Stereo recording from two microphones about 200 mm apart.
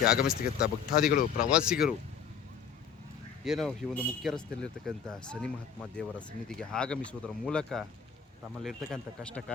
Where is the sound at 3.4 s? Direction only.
Centre (ahead or behind).